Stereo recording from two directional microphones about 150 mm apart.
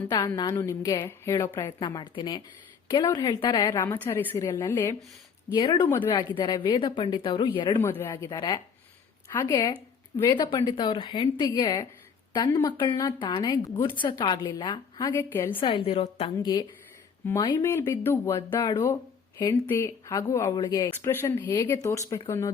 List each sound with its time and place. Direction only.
0.1 s speech: 25° left (ahead or behind)
3.8 s speech: 15° left (ahead or behind)
5.5 s speech: 35° left (ahead or behind)
5.9 s speech: 15° left (ahead or behind)
6.1 s speech: 30° left (ahead or behind)
7.8 s speech: 15° left (ahead or behind)
15.1 s speech: 15° left (ahead or behind)
15.5 s speech: 35° left (ahead or behind)
17.4 s speech: 20° left (ahead or behind)